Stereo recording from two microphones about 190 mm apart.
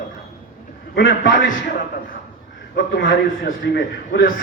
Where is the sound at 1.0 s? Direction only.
70° left (ahead or behind).